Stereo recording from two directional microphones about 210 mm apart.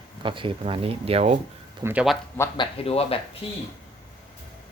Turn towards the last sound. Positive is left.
turn(degrees=25)  # may be behind; listen again after turning